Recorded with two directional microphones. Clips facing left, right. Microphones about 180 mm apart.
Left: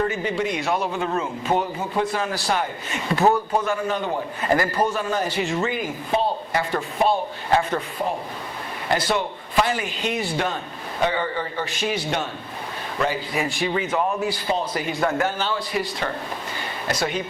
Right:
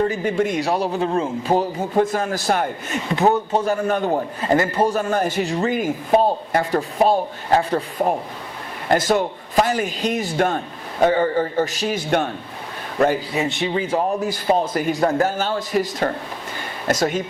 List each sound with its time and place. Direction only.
0.3 s a man's voice: 50° right (ahead or behind); by 1.6 s 35° right (ahead or behind)
2.0 s a man's voice: 45° right (ahead or behind)
3.1 s speech: 20° right (ahead or behind)
3.7 s a man's voice: 50° right (ahead or behind)
4.4 s speech: 25° right (ahead or behind)
4.9 s a man's voice: 45° right (ahead or behind)
5.4 s a man's voice: 35° right (ahead or behind)
8.9 s a man's voice: 45° right (ahead or behind)
13.3 s a man's voice: 25° right (ahead or behind); by 17.2 s 45° right (ahead or behind)